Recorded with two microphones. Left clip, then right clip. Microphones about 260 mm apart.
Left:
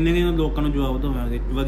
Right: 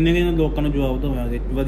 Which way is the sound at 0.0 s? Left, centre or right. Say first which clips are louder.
Right 2 dB; left.